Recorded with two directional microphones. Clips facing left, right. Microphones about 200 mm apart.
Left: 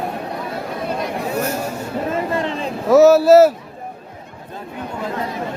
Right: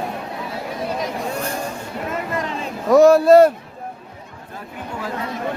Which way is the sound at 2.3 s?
30° left (ahead or behind).